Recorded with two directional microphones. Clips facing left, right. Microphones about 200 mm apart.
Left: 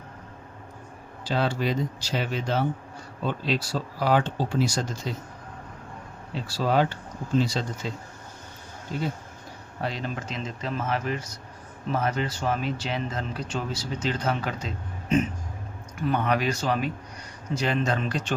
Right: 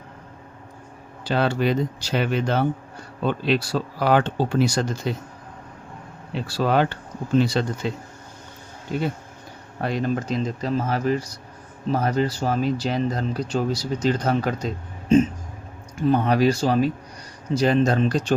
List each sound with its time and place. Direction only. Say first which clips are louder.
1.2 s speech: right 4 dB; 60° right (ahead or behind)
6.5 s speech: right 3 dB; 60° right (ahead or behind)
9.8 s speech: right 7 dB; 50° right (ahead or behind)
16.0 s speech: right 6 dB; 30° right (ahead or behind)